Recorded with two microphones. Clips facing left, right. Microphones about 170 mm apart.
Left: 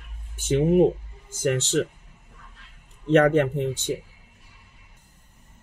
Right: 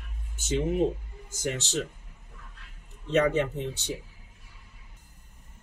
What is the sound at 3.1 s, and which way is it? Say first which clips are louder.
Speech: left 6 dB; 55° left (ahead or behind).